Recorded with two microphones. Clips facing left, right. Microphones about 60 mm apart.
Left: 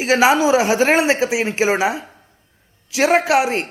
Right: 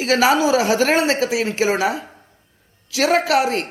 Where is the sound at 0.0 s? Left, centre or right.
Centre.